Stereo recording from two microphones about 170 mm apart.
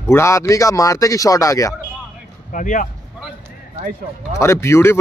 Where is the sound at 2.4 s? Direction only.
50° left (ahead or behind).